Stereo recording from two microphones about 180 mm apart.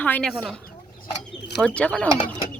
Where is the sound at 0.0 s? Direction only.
5° left (ahead or behind).